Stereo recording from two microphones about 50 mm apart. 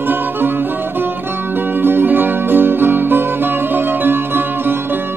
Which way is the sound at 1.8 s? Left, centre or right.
Right.